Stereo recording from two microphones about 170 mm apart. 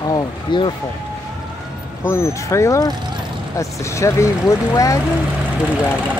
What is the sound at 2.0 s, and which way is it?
Speech, 15° left (ahead or behind).